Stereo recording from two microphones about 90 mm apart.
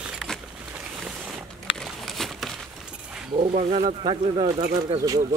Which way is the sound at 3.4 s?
90° right.